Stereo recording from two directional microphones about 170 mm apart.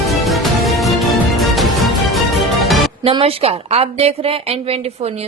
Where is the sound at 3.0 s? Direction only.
35° right (ahead or behind).